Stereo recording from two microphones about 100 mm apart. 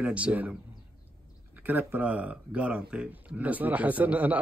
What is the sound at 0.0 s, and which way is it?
Speech, 15° right (ahead or behind).